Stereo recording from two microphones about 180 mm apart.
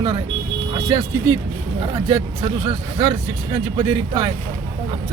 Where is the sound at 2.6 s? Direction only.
35° right (ahead or behind).